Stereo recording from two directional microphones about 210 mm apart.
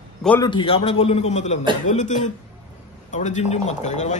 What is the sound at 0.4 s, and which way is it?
A man's voice, 25° left (ahead or behind).